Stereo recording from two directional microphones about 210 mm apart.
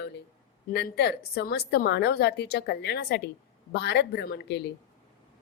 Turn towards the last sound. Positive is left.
turn(degrees=50)  # may be behind; listen again after turning